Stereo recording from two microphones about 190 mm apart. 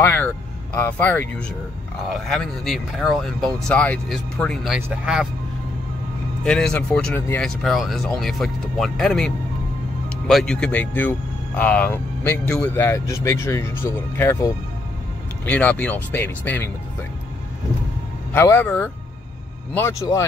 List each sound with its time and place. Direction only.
0.0 s speech: 10° left (ahead or behind)
6.4 s speech: 5° left (ahead or behind)
18.3 s speech: 10° left (ahead or behind)